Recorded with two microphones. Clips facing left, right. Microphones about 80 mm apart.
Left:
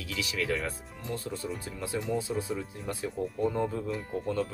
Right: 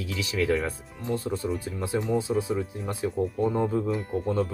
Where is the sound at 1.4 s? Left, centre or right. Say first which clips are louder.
Right 6 dB; centre.